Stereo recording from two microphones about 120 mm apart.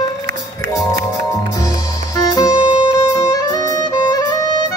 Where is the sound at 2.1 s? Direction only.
30° left (ahead or behind).